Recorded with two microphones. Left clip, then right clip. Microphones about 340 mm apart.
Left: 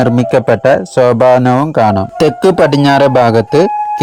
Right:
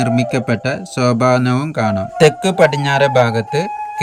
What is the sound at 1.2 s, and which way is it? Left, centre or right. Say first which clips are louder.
Speech: left 7 dB; left.